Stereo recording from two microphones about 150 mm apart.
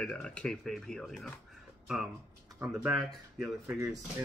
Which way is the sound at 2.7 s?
Centre (ahead or behind).